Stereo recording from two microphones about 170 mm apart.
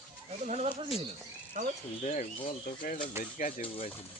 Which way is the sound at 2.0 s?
45° left (ahead or behind).